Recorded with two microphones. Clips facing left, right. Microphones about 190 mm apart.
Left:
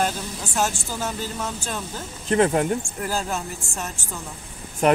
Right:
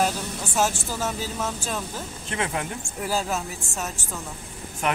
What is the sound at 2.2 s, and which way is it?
Speech, 40° left (ahead or behind).